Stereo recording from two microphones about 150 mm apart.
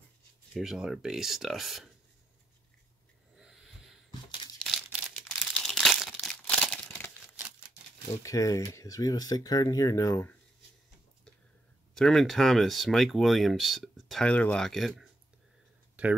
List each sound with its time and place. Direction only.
0.6 s speech: 5° right (ahead or behind)
4.8 s crumpling: 5° right (ahead or behind); by 7.1 s 10° left (ahead or behind)
8.2 s speech: 20° left (ahead or behind)
11.9 s speech: 5° left (ahead or behind)